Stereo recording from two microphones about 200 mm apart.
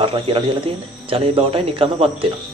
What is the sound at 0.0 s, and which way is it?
Speech, 25° right (ahead or behind).